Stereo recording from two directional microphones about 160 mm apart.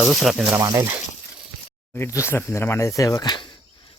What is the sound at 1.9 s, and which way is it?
Speech, 15° left (ahead or behind).